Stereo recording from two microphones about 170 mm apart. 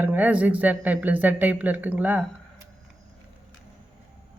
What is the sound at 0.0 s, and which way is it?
Speech, 10° right (ahead or behind).